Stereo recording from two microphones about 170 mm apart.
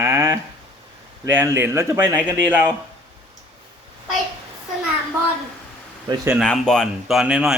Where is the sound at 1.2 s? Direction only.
15° right (ahead or behind).